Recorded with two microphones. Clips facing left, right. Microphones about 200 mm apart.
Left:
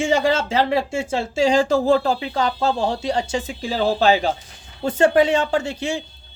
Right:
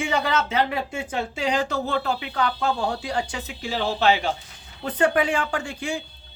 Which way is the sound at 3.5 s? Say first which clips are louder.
Left 6 dB; 35° left (ahead or behind).